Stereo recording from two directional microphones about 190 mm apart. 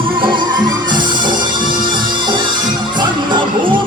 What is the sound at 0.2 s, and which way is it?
Music, 25° right (ahead or behind).